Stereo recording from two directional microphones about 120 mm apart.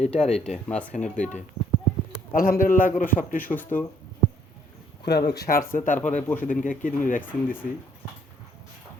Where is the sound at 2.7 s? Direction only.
90° left.